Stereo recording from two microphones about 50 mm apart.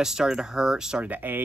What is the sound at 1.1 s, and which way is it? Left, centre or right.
Speech, right.